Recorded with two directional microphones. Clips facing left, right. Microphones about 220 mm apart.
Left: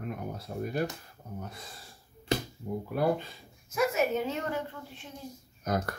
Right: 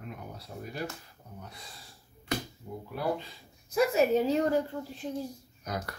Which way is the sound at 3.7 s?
35° right (ahead or behind).